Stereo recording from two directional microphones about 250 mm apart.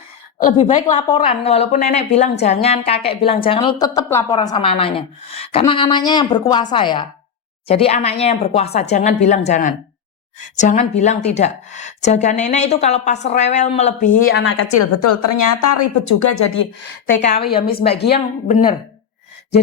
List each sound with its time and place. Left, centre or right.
0.5 s a woman's voice: left
0.9 s a woman's voice: centre; by 14.7 s left
14.7 s speech: left
16.0 s speech: left
17.2 s a woman's voice: left
17.7 s a woman's voice: left